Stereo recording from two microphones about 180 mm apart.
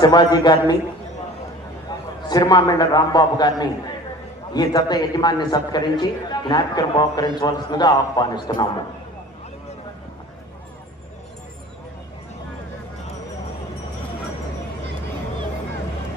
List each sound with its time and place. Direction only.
0.0 s a man's voice: 25° left (ahead or behind)
2.2 s a man's voice: 20° left (ahead or behind)